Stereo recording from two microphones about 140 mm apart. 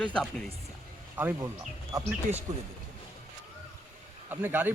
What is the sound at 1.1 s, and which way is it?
Speech, 15° right (ahead or behind).